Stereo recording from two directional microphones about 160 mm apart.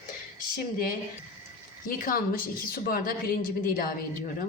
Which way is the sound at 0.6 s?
65° left (ahead or behind).